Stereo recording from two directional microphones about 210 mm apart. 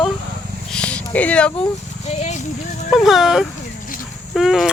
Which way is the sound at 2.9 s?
Centre (ahead or behind).